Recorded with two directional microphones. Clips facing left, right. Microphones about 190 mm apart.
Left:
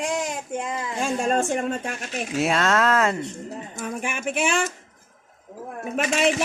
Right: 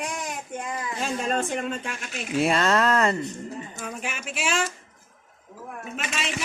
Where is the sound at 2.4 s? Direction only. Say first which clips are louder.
Even; centre (ahead or behind).